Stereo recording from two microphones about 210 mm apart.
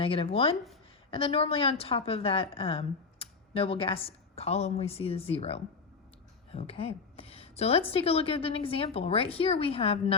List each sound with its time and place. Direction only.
0.0 s a woman's voice: 25° left (ahead or behind)